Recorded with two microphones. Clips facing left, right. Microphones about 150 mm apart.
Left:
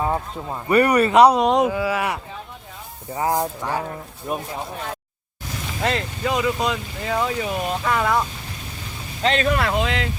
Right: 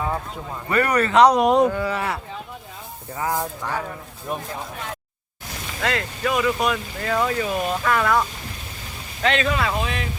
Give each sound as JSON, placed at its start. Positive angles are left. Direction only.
{"t": 0.7, "sound": "speech", "side_deg": 15}
{"t": 1.4, "sound": "speech", "side_deg": 0}
{"t": 3.2, "sound": "speech", "side_deg": 25}
{"t": 5.8, "sound": "speech", "side_deg": 25}
{"t": 9.2, "sound": "speech", "side_deg": 35}
{"t": 9.5, "sound": "speech", "side_deg": 60}